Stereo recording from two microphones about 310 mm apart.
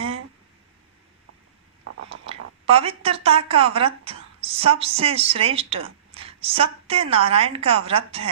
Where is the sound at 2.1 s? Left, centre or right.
Centre.